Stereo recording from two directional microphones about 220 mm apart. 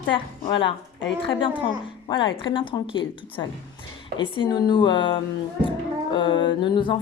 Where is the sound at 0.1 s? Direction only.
25° left (ahead or behind).